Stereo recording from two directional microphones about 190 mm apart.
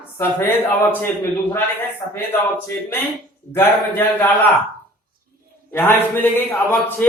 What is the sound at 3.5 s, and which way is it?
Speech, 10° left (ahead or behind).